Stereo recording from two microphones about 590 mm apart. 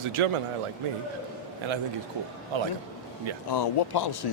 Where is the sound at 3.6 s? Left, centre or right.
Left.